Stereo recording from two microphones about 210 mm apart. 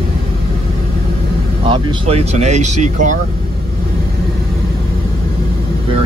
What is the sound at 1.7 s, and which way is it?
Speech, 30° right (ahead or behind).